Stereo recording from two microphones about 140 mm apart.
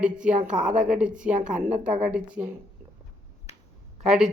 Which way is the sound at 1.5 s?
65° right (ahead or behind).